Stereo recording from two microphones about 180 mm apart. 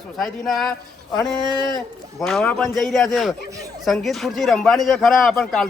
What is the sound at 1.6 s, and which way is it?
Speech, 20° left (ahead or behind).